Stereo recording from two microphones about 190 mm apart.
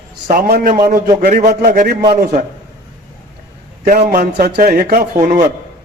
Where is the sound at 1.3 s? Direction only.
40° right (ahead or behind).